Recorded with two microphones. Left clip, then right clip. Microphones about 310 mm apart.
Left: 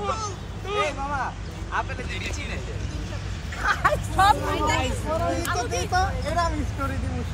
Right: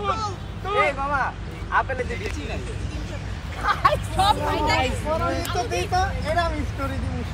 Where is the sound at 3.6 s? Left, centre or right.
Right.